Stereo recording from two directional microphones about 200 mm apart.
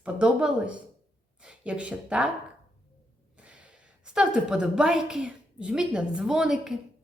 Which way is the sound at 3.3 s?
5° right (ahead or behind).